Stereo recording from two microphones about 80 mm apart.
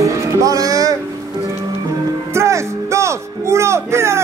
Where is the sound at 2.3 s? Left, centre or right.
Right.